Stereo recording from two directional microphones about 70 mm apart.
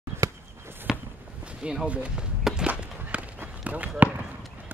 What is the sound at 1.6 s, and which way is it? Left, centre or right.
Speech, centre.